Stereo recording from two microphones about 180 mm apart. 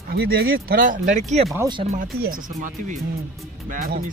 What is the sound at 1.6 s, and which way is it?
Speech, 25° right (ahead or behind).